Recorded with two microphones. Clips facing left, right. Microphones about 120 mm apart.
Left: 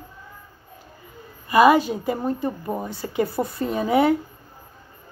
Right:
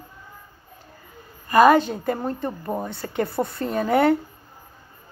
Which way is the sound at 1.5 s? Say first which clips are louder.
Even; 5° left (ahead or behind).